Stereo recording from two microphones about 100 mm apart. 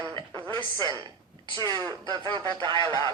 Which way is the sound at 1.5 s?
45° right (ahead or behind).